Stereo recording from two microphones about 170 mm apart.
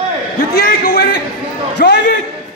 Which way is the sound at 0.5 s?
70° left (ahead or behind).